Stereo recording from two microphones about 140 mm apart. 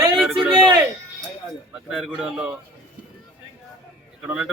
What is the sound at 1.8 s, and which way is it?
Speech, centre (ahead or behind).